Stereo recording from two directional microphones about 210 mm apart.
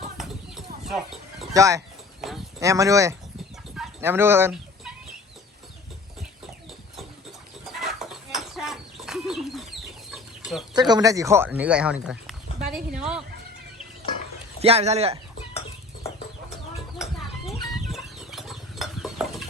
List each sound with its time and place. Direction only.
0.9 s horse: centre (ahead or behind)
1.5 s speech: 15° right (ahead or behind)
3.8 s fowl: 10° right (ahead or behind)
7.6 s a sound: centre (ahead or behind)
10.1 s chicken: centre (ahead or behind)
10.8 s speech: 20° right (ahead or behind); by 13.2 s 5° right (ahead or behind)
14.6 s speech: 30° right (ahead or behind)
17.8 s a sound: centre (ahead or behind)